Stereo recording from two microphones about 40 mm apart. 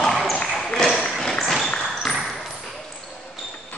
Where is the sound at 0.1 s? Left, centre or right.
Centre.